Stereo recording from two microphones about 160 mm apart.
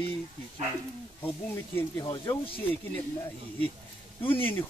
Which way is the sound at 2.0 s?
30° left (ahead or behind).